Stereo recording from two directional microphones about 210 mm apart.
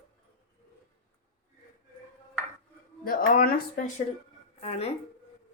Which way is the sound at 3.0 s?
40° left (ahead or behind).